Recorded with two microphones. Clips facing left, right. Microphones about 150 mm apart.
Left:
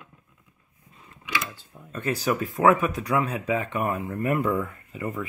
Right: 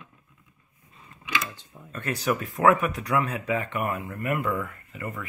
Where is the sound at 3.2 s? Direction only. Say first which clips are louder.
Left 1 dB; 15° left (ahead or behind).